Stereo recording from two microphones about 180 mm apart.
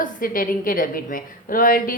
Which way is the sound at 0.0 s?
50° left (ahead or behind).